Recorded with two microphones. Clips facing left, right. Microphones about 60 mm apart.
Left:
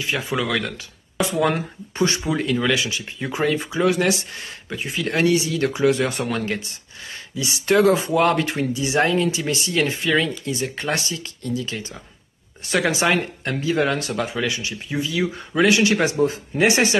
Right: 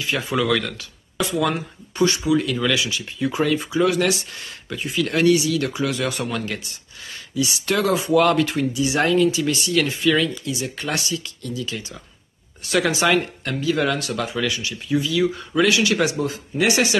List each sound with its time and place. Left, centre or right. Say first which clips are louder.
0.0 s speech: right 1 dB; left
1.5 s speech: left 2 dB; left
10.4 s speech: left 2 dB; left
12.7 s speech: right 1 dB; left